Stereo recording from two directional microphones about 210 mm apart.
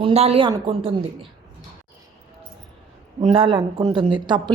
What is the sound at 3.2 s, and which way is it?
Speech, 25° right (ahead or behind).